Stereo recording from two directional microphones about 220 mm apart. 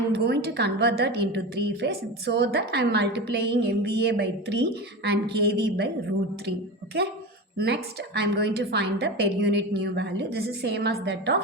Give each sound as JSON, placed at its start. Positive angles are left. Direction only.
{"t": 0.3, "sound": "a woman's voice", "side_deg": -50}
{"t": 7.6, "sound": "a woman's voice", "side_deg": -50}